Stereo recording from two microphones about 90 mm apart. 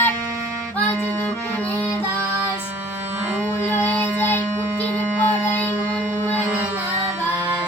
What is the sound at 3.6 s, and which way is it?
Music, 20° left (ahead or behind).